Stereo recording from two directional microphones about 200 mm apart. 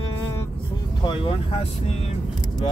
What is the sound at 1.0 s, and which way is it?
Speech, 25° left (ahead or behind).